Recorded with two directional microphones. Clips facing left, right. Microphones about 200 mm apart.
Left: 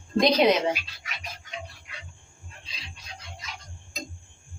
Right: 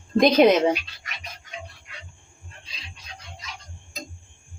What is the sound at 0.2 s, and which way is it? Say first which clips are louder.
Speech: right 4 dB; 50° right (ahead or behind).